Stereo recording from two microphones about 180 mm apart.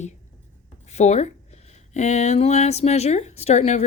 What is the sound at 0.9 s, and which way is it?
A woman's voice, 40° left (ahead or behind).